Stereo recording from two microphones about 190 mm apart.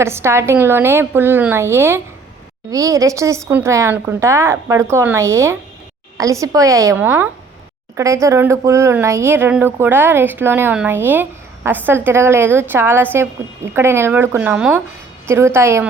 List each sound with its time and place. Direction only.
0.0 s speech: 15° right (ahead or behind)